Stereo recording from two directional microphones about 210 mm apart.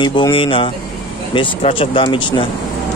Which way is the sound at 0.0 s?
25° left (ahead or behind).